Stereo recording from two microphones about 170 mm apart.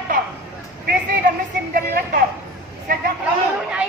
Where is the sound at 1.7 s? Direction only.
55° right (ahead or behind).